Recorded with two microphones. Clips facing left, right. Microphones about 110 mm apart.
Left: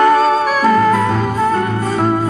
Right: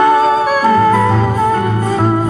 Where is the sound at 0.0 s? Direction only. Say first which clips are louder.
Right 1 dB; 15° right (ahead or behind).